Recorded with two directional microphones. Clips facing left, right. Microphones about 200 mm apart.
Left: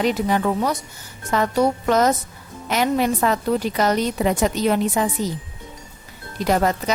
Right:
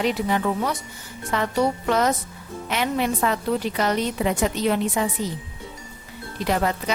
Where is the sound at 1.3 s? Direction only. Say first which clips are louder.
Left 3 dB; 45° left (ahead or behind).